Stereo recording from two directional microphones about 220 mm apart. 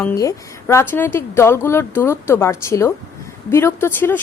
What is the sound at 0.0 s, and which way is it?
Speech, 15° left (ahead or behind).